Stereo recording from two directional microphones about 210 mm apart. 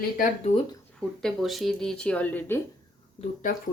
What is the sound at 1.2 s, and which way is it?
Speech, centre (ahead or behind).